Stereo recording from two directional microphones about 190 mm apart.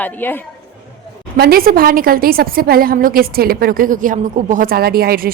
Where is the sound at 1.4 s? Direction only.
50° right (ahead or behind).